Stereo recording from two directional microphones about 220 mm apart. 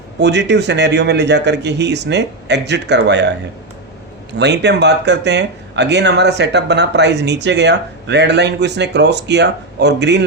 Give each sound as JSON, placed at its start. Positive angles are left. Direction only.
{"t": 0.2, "sound": "speech", "side_deg": -50}
{"t": 4.4, "sound": "speech", "side_deg": -50}